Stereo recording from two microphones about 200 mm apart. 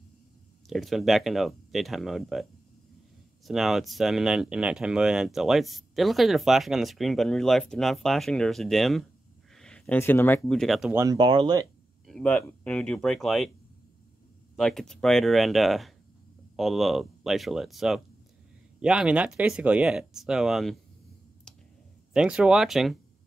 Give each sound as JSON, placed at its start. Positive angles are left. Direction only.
{"t": 0.7, "sound": "speech", "side_deg": 0}
{"t": 3.4, "sound": "speech", "side_deg": 0}
{"t": 11.0, "sound": "speech", "side_deg": -20}
{"t": 12.1, "sound": "speech", "side_deg": 5}
{"t": 14.6, "sound": "speech", "side_deg": 0}
{"t": 21.5, "sound": "clicking", "side_deg": 5}
{"t": 22.1, "sound": "speech", "side_deg": -5}